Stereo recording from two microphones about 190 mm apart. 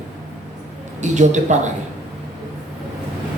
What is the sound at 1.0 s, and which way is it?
Speech, 40° right (ahead or behind).